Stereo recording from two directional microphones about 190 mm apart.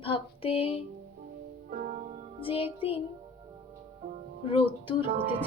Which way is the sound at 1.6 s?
50° right (ahead or behind).